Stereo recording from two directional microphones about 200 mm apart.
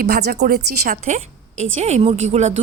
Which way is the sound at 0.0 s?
50° right (ahead or behind).